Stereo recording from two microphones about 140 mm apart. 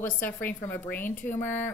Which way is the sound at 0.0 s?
15° left (ahead or behind).